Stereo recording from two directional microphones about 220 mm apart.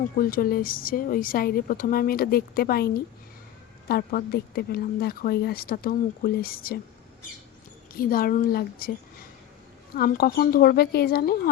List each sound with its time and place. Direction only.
0.0 s speech: 40° left (ahead or behind)
7.9 s speech: 40° left (ahead or behind)
9.9 s speech: 45° left (ahead or behind)